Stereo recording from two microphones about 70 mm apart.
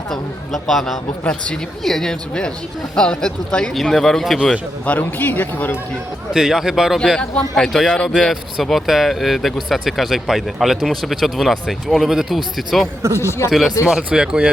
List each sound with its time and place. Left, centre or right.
0.1 s a man's voice: centre
1.2 s speech: centre
1.8 s speech: centre
4.9 s speech: left
6.3 s speech: centre